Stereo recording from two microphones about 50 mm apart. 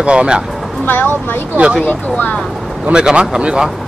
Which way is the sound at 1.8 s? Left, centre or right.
Left.